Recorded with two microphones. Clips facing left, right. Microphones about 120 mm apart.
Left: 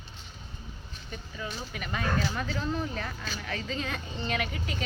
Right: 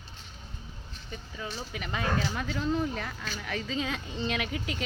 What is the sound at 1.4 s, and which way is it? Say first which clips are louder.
Speech: even; 20° right (ahead or behind).